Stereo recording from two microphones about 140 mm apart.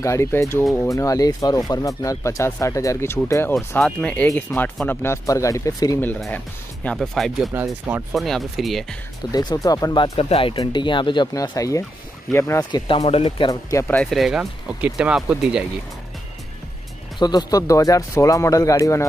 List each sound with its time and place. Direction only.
0.0 s speech: 20° left (ahead or behind)
3.5 s speech: 5° left (ahead or behind); by 5.9 s 25° left (ahead or behind)
6.3 s speech: 10° left (ahead or behind)
7.5 s speech: 15° right (ahead or behind)
8.1 s speech: centre (ahead or behind)
9.3 s speech: 30° left (ahead or behind)
10.1 s speech: 45° left (ahead or behind)
11.3 s speech: 25° left (ahead or behind)
12.8 s speech: 40° left (ahead or behind)
13.5 s speech: 25° left (ahead or behind)
14.1 s speech: centre (ahead or behind)
17.2 s speech: 30° left (ahead or behind)